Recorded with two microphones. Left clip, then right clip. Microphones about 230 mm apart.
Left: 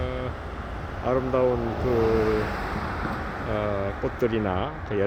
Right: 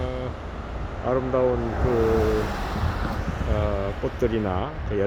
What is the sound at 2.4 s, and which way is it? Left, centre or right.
Waves, right.